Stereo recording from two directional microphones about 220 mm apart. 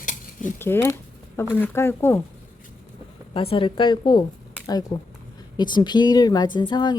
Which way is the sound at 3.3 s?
25° left (ahead or behind).